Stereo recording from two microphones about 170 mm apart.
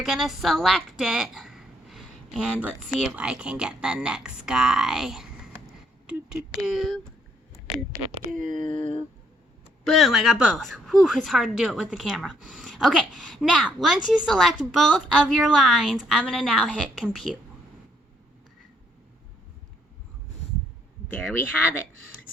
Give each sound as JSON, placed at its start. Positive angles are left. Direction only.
{"t": 0.0, "sound": "a woman's voice", "side_deg": 0}
{"t": 8.3, "sound": "speech", "side_deg": -50}
{"t": 9.8, "sound": "a woman's voice", "side_deg": 0}
{"t": 21.1, "sound": "speech", "side_deg": 5}